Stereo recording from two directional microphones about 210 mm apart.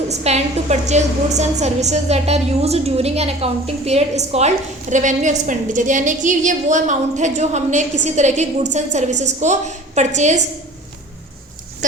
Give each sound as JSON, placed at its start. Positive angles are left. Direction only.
{"t": 0.1, "sound": "a woman's voice", "side_deg": -30}
{"t": 11.8, "sound": "goat", "side_deg": -35}